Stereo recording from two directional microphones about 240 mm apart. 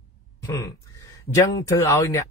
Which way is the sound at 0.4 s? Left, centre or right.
Centre.